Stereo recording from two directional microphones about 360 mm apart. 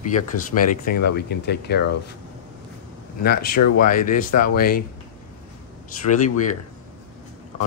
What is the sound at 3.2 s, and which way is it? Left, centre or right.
Speech, left.